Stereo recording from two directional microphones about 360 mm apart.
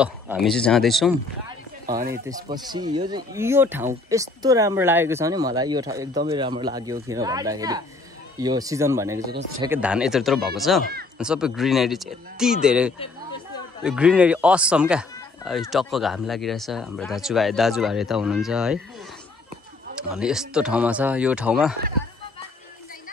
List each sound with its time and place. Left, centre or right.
0.0 s speech: centre
1.9 s speech: centre
10.8 s speech: right
11.1 s speech: centre
20.0 s speech: centre